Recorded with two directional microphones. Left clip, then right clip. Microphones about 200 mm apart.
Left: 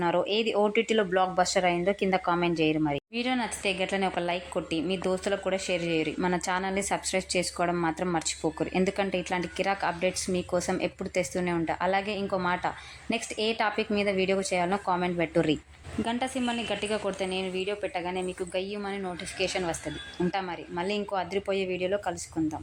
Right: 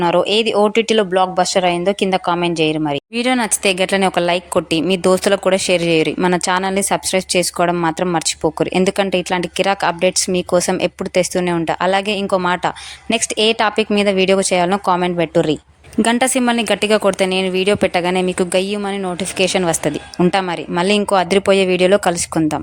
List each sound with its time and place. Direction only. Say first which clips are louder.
0.0 s speech: right 12 dB; 25° right (ahead or behind)
3.2 s a woman's voice: right 15 dB; 35° right (ahead or behind)
16.0 s a woman's voice: right 15 dB; 40° right (ahead or behind)